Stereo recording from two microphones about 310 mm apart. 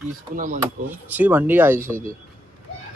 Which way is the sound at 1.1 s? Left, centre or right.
Centre.